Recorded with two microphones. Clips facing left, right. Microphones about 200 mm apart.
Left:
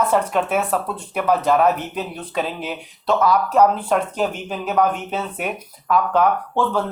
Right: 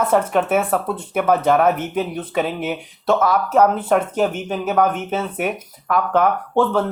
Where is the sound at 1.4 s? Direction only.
55° right (ahead or behind).